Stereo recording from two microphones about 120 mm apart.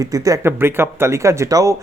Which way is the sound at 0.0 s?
30° right (ahead or behind).